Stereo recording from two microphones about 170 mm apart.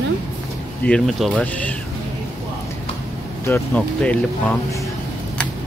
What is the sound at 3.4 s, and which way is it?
Speech, 5° left (ahead or behind).